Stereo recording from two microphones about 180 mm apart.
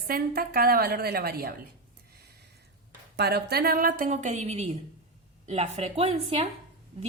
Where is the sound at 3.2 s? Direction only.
65° right (ahead or behind); by 6.5 s 35° right (ahead or behind).